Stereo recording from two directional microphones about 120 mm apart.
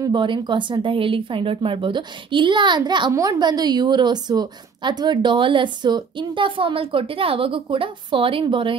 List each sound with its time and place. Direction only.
0.0 s a woman's voice: 40° right (ahead or behind)
3.1 s a woman's voice: 30° right (ahead or behind); by 8.7 s 45° right (ahead or behind)